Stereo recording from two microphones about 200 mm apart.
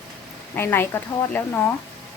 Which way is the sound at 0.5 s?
10° left (ahead or behind).